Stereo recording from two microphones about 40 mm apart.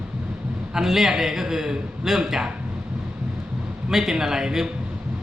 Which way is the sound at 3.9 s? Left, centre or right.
Centre.